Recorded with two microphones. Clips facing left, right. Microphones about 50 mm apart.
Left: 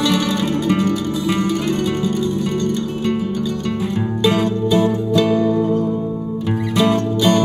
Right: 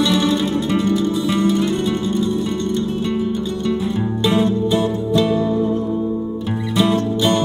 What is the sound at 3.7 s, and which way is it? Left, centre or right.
Music, left.